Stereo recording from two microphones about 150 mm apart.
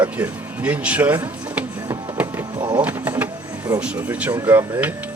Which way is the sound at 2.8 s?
10° right (ahead or behind).